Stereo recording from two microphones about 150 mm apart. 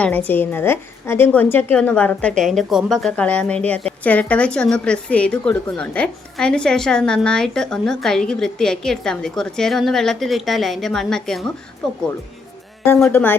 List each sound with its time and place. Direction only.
0.0 s a woman's voice: 10° left (ahead or behind)
13.0 s a woman's voice: 15° left (ahead or behind)